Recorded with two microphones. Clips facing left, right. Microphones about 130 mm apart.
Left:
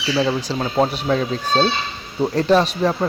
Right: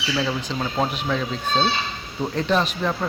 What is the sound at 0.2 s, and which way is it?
Speech, 30° left (ahead or behind).